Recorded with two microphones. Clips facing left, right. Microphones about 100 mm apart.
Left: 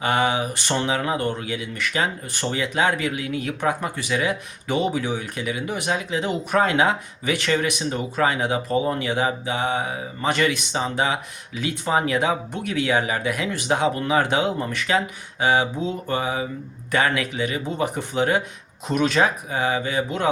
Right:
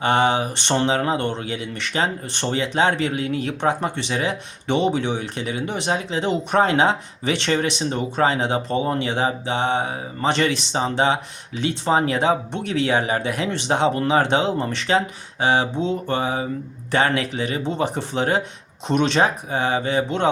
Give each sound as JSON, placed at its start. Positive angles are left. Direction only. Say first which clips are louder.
{"t": 0.0, "sound": "speech", "louder": "right 3 dB", "side_deg": -30}